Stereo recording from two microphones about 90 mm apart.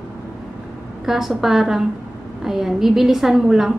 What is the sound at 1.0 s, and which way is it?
A woman's voice, 5° right (ahead or behind).